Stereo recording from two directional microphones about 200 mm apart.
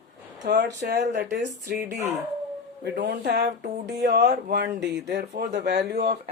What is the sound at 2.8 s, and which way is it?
Speech, 50° right (ahead or behind).